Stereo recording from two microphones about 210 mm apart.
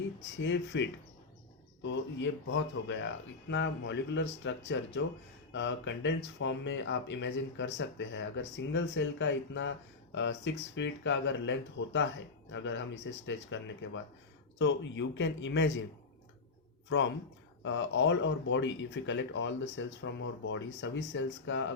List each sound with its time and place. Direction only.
0.3 s speech: 60° left (ahead or behind)
17.6 s speech: 60° left (ahead or behind)